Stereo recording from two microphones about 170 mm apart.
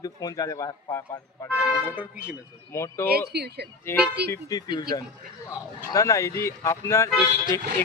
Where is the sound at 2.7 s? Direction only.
15° left (ahead or behind).